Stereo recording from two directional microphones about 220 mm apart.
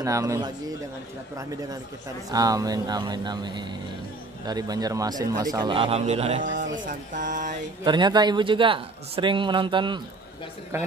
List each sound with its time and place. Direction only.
0.0 s speech: 15° right (ahead or behind)
2.3 s speech: 15° right (ahead or behind); by 6.6 s 30° right (ahead or behind)
6.8 s mantra: 35° right (ahead or behind)
7.8 s speech: 20° right (ahead or behind)